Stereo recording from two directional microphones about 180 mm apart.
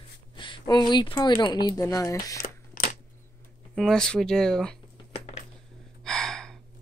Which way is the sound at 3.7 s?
5° left (ahead or behind).